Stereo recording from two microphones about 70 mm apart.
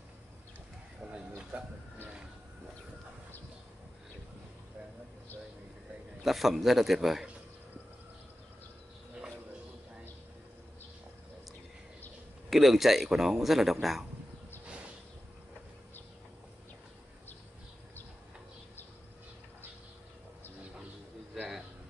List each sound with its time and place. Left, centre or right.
1.0 s a sound: right
1.5 s speech: right
6.2 s speech: centre
12.4 s speech: centre